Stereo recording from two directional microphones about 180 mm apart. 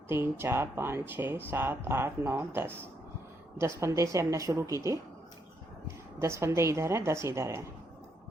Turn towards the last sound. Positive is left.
turn(degrees=-15)  # may be behind; listen again after turning